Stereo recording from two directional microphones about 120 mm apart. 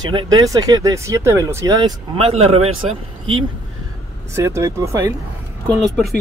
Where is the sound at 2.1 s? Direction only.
60° right (ahead or behind).